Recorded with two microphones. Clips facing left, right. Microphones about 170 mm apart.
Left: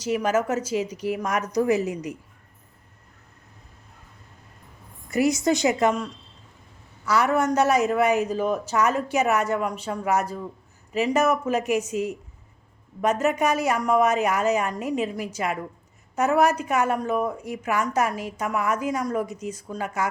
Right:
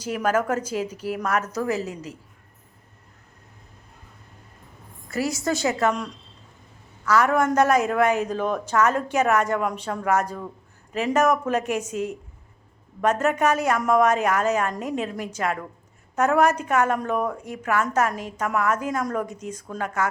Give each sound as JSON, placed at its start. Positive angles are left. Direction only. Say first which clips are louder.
{"t": 0.1, "sound": "a man's voice", "louder": "even", "side_deg": 5}
{"t": 5.1, "sound": "a man's voice", "louder": "left 4 dB", "side_deg": 20}
{"t": 7.0, "sound": "a man's voice", "louder": "right 1 dB", "side_deg": 10}